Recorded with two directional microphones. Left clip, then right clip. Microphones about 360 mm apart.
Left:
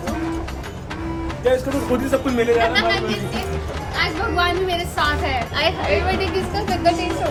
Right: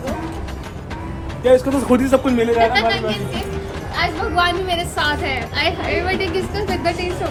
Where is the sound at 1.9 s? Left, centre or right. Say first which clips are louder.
Right 6 dB; right.